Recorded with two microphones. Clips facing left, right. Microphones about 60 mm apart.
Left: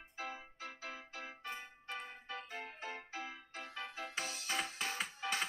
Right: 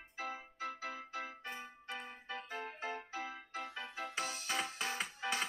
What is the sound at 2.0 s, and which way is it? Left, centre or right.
Keyboard, right.